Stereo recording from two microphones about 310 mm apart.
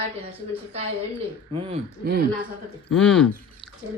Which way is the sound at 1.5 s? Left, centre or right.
Centre.